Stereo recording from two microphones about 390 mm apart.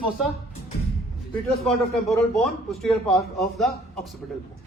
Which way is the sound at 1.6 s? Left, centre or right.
Centre.